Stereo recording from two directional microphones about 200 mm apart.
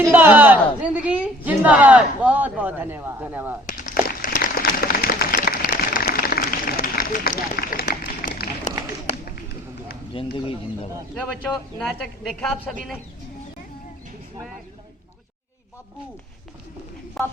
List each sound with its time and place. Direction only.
0.1 s speech: 10° right (ahead or behind)
3.7 s a sound: 40° left (ahead or behind)
10.3 s speech: 25° left (ahead or behind)
11.8 s a woman's voice: 5° left (ahead or behind)
17.2 s a woman's voice: centre (ahead or behind)